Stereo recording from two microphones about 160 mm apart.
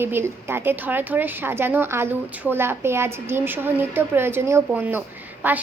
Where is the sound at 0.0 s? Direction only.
15° right (ahead or behind).